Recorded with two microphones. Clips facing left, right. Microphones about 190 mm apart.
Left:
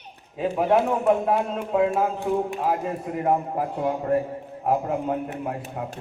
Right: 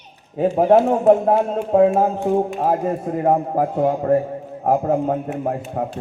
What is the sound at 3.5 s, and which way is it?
Speech, 55° right (ahead or behind).